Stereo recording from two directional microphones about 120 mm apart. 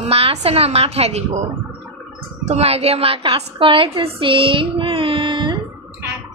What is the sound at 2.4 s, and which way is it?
A woman's voice, 60° right (ahead or behind).